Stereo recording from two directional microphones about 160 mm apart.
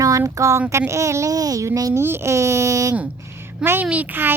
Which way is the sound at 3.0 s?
15° right (ahead or behind).